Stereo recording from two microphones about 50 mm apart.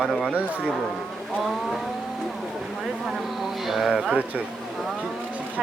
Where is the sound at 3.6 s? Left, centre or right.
Centre.